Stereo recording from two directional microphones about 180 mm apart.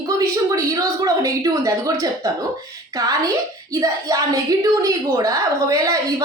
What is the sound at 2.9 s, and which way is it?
Speech, 20° right (ahead or behind).